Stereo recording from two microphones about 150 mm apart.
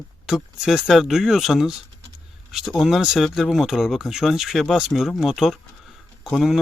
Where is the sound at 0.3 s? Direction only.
5° right (ahead or behind).